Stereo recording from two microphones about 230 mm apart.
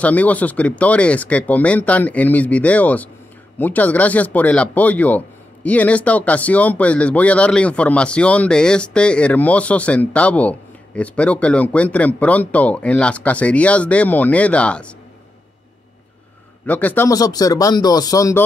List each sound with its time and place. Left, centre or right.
0.0 s speech: centre
16.6 s speech: centre